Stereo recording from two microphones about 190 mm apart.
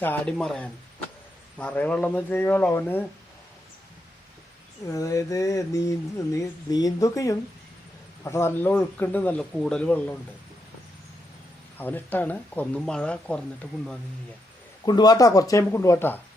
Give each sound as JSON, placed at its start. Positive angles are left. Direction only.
{"t": 0.0, "sound": "speech", "side_deg": 10}
{"t": 4.9, "sound": "speech", "side_deg": 20}
{"t": 11.8, "sound": "speech", "side_deg": 10}
{"t": 14.8, "sound": "speech", "side_deg": 20}